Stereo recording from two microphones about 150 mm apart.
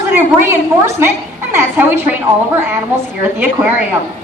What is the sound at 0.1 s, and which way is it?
A woman's voice, 15° right (ahead or behind).